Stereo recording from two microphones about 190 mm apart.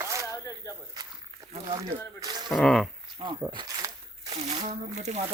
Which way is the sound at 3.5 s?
20° right (ahead or behind).